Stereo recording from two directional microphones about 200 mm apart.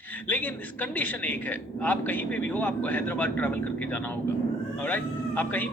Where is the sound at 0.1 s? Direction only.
10° left (ahead or behind).